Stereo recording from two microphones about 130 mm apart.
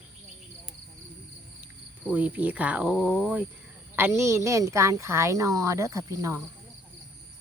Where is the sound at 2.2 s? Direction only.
10° right (ahead or behind).